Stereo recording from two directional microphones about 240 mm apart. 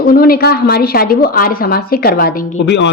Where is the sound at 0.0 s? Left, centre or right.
Left.